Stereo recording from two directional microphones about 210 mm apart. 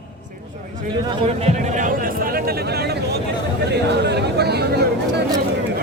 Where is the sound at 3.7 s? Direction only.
55° right (ahead or behind).